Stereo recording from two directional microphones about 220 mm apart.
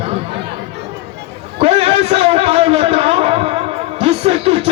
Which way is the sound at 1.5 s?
25° right (ahead or behind).